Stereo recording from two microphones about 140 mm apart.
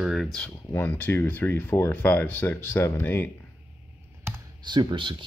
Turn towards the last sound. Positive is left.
turn(degrees=-35)  # may be behind; listen again after turning